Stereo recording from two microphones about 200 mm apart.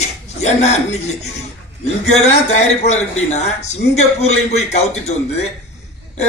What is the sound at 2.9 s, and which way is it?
A man's voice, 35° left (ahead or behind).